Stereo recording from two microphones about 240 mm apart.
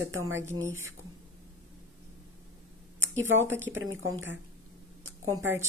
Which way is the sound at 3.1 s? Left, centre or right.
Right.